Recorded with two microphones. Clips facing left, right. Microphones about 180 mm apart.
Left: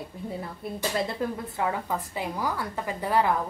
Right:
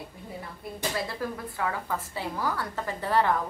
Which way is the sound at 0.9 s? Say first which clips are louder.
Left 5 dB; 20° left (ahead or behind).